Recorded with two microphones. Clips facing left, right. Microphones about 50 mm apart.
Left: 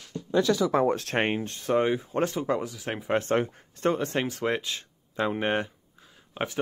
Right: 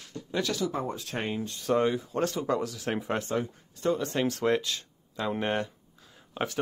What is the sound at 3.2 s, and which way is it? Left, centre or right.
Speech, left.